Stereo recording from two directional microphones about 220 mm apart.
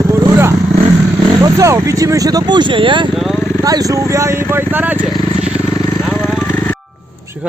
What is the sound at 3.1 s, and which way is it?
Speech, centre (ahead or behind).